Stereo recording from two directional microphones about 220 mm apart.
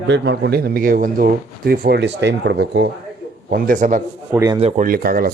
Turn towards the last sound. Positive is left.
turn(degrees=-40)  # may be behind; listen again after turning